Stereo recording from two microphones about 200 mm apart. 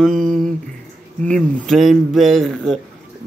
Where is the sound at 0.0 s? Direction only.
Centre (ahead or behind).